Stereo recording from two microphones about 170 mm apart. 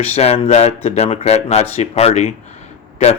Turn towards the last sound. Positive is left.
turn(degrees=40)  # may be behind; listen again after turning